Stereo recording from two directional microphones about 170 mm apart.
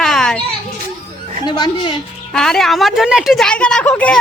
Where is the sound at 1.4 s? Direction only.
25° left (ahead or behind).